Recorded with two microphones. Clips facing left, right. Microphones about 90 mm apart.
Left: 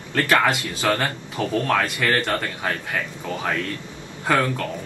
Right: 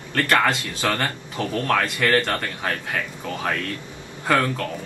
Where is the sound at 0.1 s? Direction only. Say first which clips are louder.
Left 1 dB; 10° left (ahead or behind).